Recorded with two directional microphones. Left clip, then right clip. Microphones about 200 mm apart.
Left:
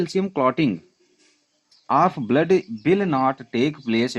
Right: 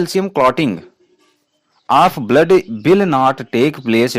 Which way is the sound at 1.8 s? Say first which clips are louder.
Right 7 dB; 35° right (ahead or behind).